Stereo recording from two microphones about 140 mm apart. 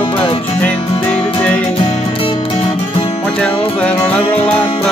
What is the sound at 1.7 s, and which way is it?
Music, 40° left (ahead or behind).